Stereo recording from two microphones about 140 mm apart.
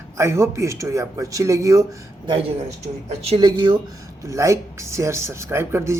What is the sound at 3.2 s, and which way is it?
Speech, 45° right (ahead or behind).